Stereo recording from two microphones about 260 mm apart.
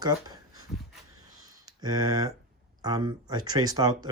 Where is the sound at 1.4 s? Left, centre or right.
Centre.